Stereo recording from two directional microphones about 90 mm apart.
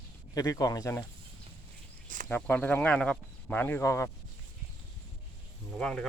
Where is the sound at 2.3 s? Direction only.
20° left (ahead or behind).